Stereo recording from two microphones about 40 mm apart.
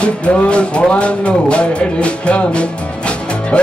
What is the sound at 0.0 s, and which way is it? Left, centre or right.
Music, left.